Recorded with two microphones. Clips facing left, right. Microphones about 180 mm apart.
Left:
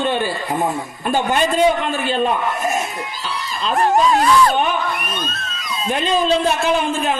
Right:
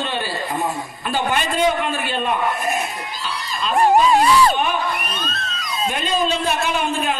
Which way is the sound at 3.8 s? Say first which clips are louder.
Right 1 dB; 10° right (ahead or behind).